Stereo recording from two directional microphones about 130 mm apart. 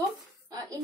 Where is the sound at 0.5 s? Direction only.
25° right (ahead or behind).